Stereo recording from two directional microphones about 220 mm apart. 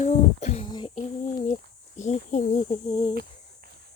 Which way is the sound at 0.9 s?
35° left (ahead or behind).